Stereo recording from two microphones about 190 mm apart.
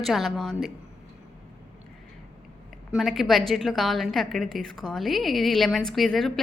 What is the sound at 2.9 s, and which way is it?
A woman's voice, centre (ahead or behind).